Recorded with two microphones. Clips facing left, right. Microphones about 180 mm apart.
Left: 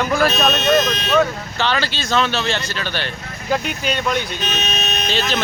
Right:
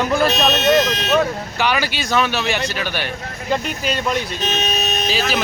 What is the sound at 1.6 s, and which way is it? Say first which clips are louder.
Speech: right 1 dB; 10° right (ahead or behind).